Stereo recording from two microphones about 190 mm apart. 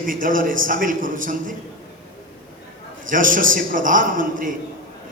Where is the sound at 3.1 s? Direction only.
45° right (ahead or behind).